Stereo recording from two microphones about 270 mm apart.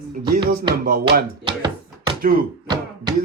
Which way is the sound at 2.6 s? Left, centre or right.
Centre.